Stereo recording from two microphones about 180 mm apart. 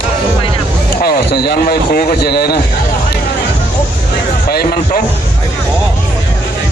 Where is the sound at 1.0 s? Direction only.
60° left (ahead or behind).